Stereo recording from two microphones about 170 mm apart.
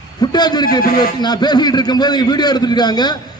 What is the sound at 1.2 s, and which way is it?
A man's voice, 25° left (ahead or behind).